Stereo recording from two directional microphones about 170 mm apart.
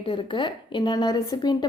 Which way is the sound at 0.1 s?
30° left (ahead or behind).